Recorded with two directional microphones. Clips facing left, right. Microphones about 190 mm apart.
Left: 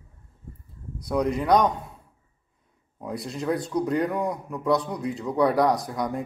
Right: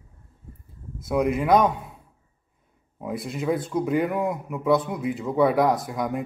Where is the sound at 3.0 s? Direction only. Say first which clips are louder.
Right 2 dB; 5° right (ahead or behind).